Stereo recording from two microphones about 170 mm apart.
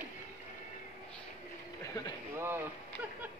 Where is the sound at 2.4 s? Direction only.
15° right (ahead or behind).